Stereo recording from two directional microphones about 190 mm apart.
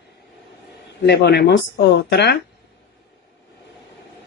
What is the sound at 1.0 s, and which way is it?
Speech, 60° left (ahead or behind).